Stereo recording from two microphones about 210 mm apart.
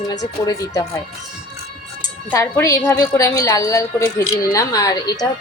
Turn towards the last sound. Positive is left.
turn(degrees=15)  # may be behind; listen again after turning